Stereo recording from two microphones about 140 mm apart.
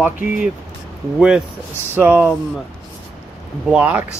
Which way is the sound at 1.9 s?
15° right (ahead or behind).